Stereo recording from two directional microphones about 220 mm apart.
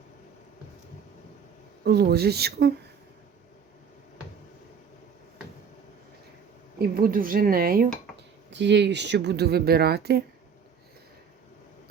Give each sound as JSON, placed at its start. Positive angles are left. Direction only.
{"t": 1.8, "sound": "speech", "side_deg": -45}
{"t": 6.7, "sound": "speech", "side_deg": -40}
{"t": 8.5, "sound": "speech", "side_deg": -55}